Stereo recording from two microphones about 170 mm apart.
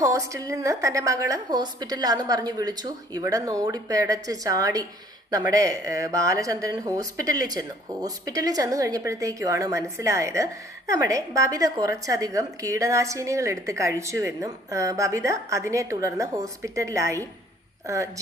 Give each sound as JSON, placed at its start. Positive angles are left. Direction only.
{"t": 0.0, "sound": "a woman's voice", "side_deg": -20}